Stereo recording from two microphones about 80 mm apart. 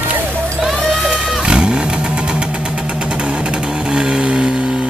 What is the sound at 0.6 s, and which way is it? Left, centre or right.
Vehicle, centre.